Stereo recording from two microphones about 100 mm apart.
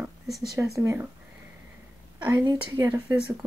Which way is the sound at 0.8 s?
30° right (ahead or behind).